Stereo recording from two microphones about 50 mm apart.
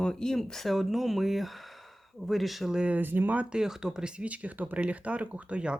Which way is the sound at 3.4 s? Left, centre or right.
Centre.